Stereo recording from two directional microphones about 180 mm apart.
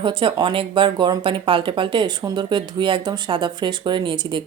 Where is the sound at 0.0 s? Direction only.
30° right (ahead or behind).